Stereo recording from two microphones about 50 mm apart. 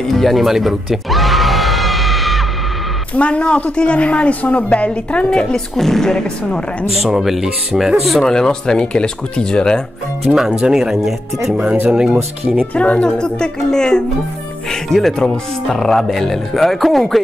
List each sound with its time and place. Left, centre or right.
0.1 s music: centre
3.2 s a woman's voice: left
5.5 s speech: centre
7.0 s speech: centre
8.2 s speech: centre
10.3 s speech: centre
11.9 s speech: centre
12.5 s speech: left; by 17.2 s centre